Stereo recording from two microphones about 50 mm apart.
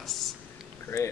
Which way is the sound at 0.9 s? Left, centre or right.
Left.